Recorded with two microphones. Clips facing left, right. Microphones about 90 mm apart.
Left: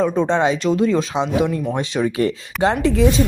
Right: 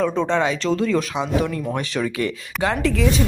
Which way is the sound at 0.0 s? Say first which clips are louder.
Left 3 dB; 20° left (ahead or behind).